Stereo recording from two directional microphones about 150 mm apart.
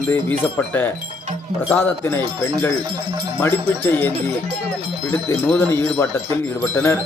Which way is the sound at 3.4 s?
15° left (ahead or behind).